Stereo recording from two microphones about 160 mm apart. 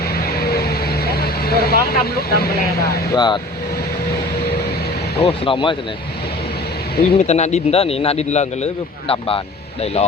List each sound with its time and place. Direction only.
0.3 s vehicle: 75° left (ahead or behind)
1.9 s speech: 75° left (ahead or behind)
3.2 s speech: 25° left (ahead or behind)
5.1 s speech: 35° left (ahead or behind)
7.0 s speech: 40° left (ahead or behind)